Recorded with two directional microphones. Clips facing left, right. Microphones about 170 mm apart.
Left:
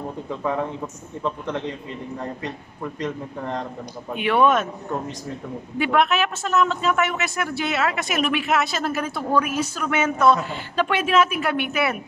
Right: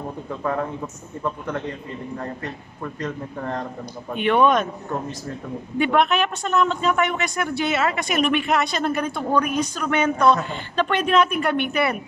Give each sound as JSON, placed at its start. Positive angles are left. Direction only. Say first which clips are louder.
{"t": 0.4, "sound": "a man's voice", "louder": "even", "side_deg": 10}
{"t": 2.1, "sound": "a man's voice", "louder": "left 1 dB", "side_deg": 15}
{"t": 5.8, "sound": "a man's voice", "louder": "right 1 dB", "side_deg": 0}